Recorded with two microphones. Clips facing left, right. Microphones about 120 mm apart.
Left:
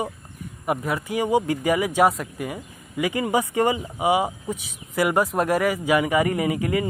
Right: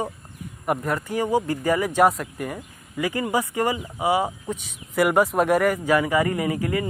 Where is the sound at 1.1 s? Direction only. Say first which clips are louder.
Left 2 dB; 15° left (ahead or behind).